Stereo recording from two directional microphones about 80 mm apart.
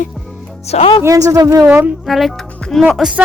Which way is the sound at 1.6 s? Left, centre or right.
Right.